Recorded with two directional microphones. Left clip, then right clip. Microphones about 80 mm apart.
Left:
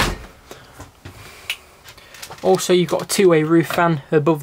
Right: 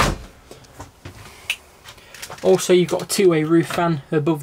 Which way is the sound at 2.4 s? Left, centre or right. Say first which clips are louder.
Even; centre.